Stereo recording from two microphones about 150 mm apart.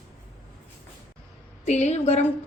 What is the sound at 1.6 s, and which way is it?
Speech, 50° left (ahead or behind).